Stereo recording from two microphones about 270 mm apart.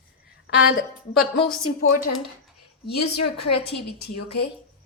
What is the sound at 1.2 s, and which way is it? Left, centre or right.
Speech, centre.